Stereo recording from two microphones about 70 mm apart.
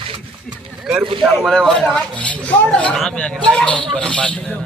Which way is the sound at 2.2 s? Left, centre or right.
Centre.